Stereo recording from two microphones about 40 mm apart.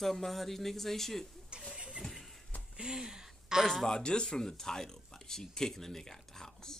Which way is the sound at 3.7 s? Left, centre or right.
Centre.